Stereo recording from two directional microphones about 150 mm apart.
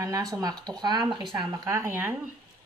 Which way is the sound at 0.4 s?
25° right (ahead or behind).